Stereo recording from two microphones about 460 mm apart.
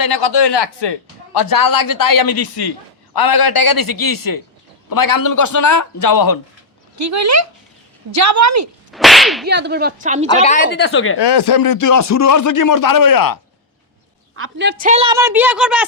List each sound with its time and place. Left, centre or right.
0.0 s speech: left
6.9 s a woman's voice: right
8.9 s whip: centre
9.5 s a woman's voice: right
10.2 s speech: centre
11.2 s speech: left
14.3 s a woman's voice: right; by 15.9 s centre